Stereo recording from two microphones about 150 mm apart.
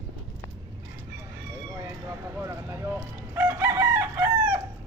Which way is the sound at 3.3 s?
15° right (ahead or behind).